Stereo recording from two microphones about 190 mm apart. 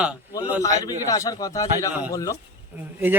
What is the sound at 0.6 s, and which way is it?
A man's voice, 20° left (ahead or behind).